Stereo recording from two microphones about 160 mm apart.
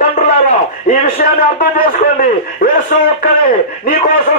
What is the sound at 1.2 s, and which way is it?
A man's voice, 65° left (ahead or behind).